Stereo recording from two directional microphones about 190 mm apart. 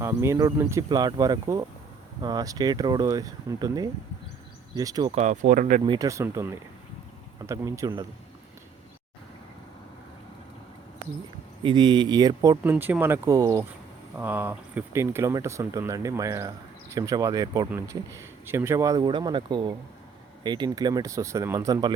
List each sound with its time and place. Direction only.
0.0 s speech: 15° right (ahead or behind)
5.1 s speech: 40° right (ahead or behind)
5.8 s speech: 20° right (ahead or behind)
11.6 s speech: 25° right (ahead or behind)